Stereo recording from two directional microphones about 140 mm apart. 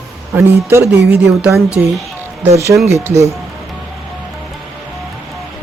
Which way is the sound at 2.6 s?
20° right (ahead or behind).